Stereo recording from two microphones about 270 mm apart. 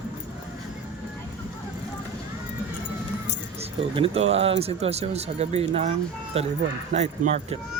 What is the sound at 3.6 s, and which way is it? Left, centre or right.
Speech, right.